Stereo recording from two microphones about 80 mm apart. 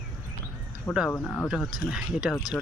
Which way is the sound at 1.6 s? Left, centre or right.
Centre.